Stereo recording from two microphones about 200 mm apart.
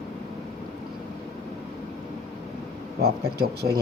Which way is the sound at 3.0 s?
50° right (ahead or behind).